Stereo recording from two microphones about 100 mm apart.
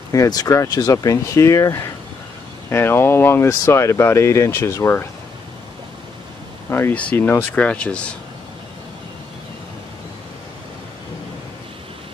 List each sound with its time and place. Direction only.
0.1 s speech: 35° left (ahead or behind)
6.7 s speech: 15° left (ahead or behind)